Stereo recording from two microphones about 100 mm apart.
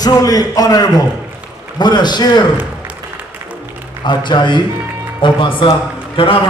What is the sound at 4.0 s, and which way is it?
A man's voice, 50° left (ahead or behind).